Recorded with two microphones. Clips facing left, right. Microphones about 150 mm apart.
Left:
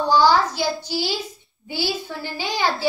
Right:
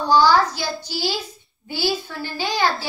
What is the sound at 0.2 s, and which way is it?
Speech, 15° left (ahead or behind).